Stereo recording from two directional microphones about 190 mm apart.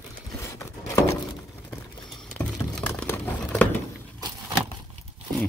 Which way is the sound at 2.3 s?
5° left (ahead or behind).